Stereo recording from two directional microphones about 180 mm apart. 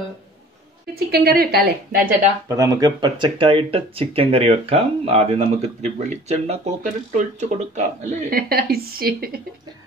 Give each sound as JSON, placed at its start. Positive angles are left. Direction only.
{"t": 0.9, "sound": "a woman's voice", "side_deg": -60}
{"t": 2.4, "sound": "speech", "side_deg": -20}